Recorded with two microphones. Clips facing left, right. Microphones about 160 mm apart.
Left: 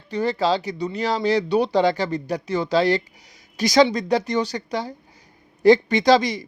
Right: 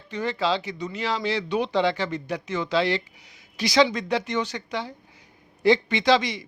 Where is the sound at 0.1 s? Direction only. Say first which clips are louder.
Left 4 dB; 35° left (ahead or behind).